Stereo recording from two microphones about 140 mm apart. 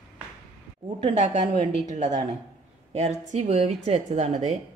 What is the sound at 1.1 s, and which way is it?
A woman's voice, 50° right (ahead or behind).